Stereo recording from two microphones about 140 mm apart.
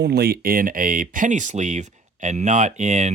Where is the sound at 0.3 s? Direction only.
90° right.